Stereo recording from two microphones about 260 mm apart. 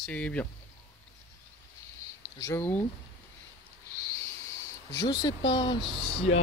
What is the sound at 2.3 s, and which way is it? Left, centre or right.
Speech, centre.